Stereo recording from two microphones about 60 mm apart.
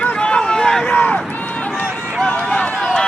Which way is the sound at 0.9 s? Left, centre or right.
Left.